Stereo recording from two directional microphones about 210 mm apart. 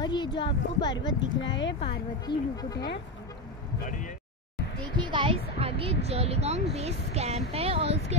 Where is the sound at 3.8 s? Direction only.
40° left (ahead or behind).